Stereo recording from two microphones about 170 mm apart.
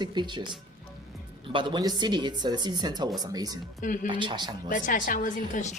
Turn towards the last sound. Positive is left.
turn(degrees=50)  # may be behind; listen again after turning